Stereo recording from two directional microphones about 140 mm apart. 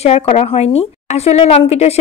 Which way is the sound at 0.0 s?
50° left (ahead or behind).